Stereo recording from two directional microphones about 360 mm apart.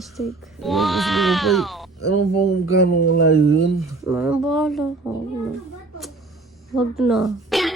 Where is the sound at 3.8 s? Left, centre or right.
Centre.